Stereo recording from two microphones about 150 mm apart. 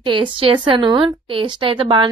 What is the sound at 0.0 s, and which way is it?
A woman's voice, 35° right (ahead or behind).